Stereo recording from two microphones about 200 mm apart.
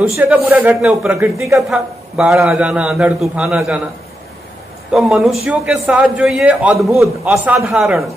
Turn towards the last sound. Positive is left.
turn(degrees=-5)  # may be behind; listen again after turning